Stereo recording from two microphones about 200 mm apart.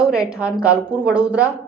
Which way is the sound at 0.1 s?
5° right (ahead or behind).